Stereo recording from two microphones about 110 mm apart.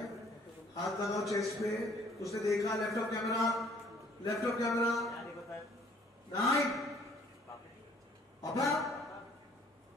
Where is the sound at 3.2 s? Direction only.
Centre (ahead or behind).